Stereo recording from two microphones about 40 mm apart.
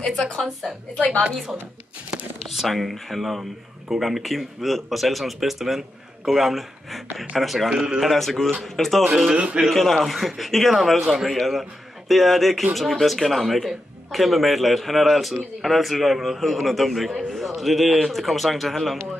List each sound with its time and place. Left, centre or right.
0.0 s a woman's voice: centre
0.9 s a woman's voice: left
2.4 s a man's voice: centre
9.0 s speech: centre
9.7 s a man's voice: centre